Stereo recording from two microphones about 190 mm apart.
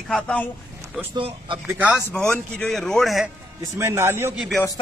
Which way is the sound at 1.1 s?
25° right (ahead or behind).